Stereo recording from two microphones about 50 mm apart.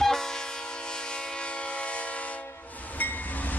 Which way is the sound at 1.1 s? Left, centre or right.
Left.